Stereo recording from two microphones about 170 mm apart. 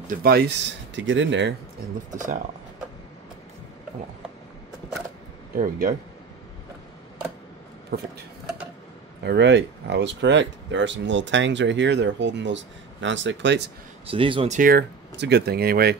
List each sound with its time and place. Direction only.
0.2 s speech: 70° right (ahead or behind); by 1.5 s 90° right
5.6 s speech: 50° right (ahead or behind)
7.9 s speech: 70° right (ahead or behind)
9.2 s speech: 85° right
14.0 s speech: 30° right (ahead or behind)
14.5 s speech: 55° right (ahead or behind)